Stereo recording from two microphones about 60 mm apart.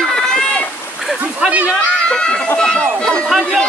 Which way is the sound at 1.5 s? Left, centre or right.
Right.